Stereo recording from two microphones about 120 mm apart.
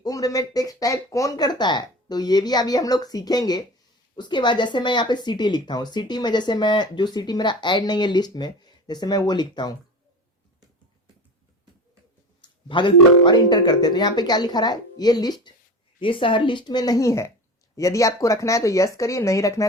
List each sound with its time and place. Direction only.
0.0 s speech: 30° left (ahead or behind)
12.4 s speech: 40° left (ahead or behind)
16.0 s speech: 45° left (ahead or behind); by 19.6 s 25° left (ahead or behind)